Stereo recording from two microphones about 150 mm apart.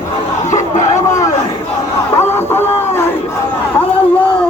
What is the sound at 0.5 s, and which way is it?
Crowd, 55° left (ahead or behind).